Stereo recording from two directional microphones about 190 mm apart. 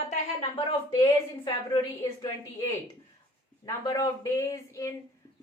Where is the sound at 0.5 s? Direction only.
20° left (ahead or behind).